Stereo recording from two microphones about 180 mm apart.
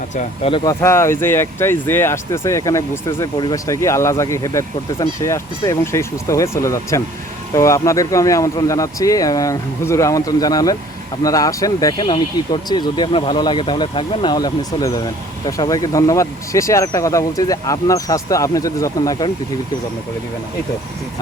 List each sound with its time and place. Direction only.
0.2 s speech: 35° left (ahead or behind)
0.6 s speech: 15° left (ahead or behind)